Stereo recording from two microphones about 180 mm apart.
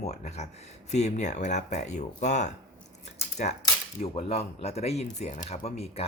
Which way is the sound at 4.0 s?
35° left (ahead or behind).